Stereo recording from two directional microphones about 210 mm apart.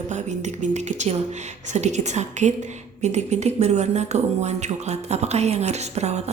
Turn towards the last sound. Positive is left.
turn(degrees=-30)  # may be behind; listen again after turning